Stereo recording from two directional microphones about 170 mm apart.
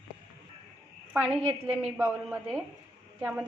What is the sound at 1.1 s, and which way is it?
A woman's voice, 10° right (ahead or behind).